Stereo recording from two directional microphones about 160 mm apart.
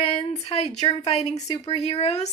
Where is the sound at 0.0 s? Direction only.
35° left (ahead or behind).